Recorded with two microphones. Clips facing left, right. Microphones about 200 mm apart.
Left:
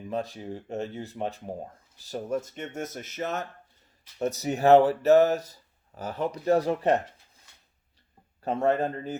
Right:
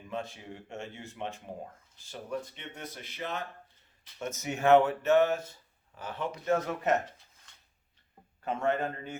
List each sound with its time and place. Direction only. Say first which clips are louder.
0.1 s speech: left 6 dB; 35° left (ahead or behind)
8.4 s speech: left 5 dB; 35° left (ahead or behind)